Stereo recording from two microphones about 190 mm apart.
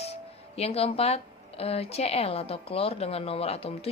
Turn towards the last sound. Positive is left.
turn(degrees=30)  # may be behind; listen again after turning